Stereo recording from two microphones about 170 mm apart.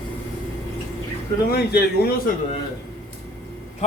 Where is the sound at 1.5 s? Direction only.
70° left (ahead or behind).